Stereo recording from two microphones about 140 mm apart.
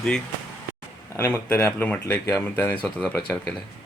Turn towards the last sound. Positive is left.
turn(degrees=10)  # may be behind; listen again after turning